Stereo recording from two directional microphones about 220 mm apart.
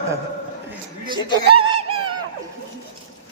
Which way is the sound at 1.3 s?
25° right (ahead or behind).